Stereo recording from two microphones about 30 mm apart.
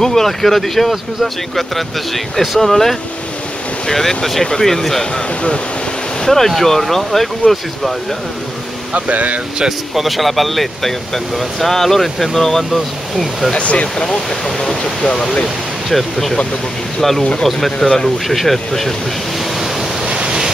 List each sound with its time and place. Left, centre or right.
0.0 s speech: centre
6.2 s speech: centre
8.9 s speech: right
9.6 s speech: centre
10.0 s speech: centre
13.6 s speech: left
14.0 s speech: centre
15.4 s speech: centre
17.5 s speech: centre
20.1 s waves: right